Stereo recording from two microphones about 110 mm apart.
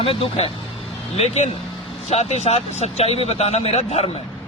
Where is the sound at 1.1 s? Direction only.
70° left (ahead or behind).